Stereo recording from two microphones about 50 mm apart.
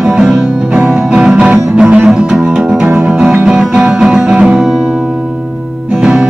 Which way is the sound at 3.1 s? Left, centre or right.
Centre.